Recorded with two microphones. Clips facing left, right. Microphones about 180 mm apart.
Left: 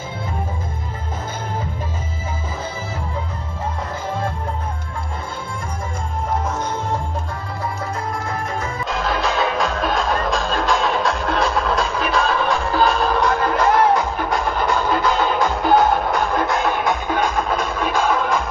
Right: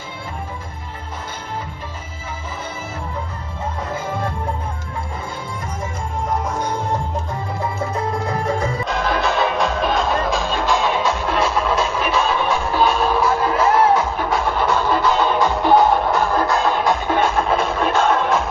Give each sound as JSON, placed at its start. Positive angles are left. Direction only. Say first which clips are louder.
{"t": 8.8, "sound": "music", "louder": "left 1 dB", "side_deg": 0}